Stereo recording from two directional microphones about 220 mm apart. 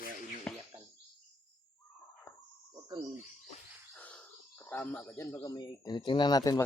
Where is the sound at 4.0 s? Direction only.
5° left (ahead or behind).